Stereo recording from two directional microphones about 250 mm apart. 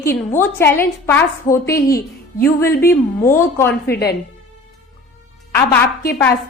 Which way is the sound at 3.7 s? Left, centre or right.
Left.